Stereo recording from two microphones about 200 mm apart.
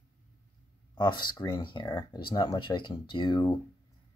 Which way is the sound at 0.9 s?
20° left (ahead or behind).